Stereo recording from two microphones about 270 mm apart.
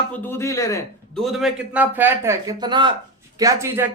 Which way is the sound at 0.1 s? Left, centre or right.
Centre.